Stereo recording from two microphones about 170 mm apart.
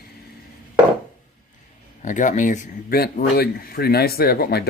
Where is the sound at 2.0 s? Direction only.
45° left (ahead or behind).